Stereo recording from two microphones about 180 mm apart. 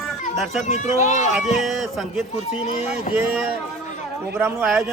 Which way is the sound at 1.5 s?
Centre (ahead or behind).